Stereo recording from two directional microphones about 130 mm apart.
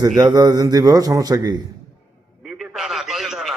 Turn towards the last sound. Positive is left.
turn(degrees=0)  # may be behind; listen again after turning